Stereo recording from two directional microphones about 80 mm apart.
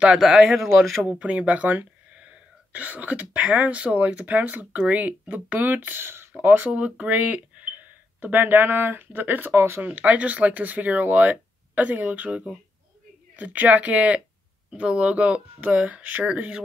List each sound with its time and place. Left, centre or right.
0.0 s speech: centre
1.0 s speech: centre